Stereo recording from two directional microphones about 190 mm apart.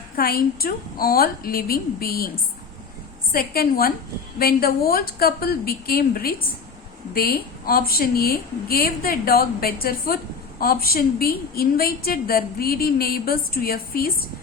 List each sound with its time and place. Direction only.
0.2 s a woman's voice: 50° left (ahead or behind)